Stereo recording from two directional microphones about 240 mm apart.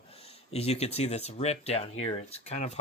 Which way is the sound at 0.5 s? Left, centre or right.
Left.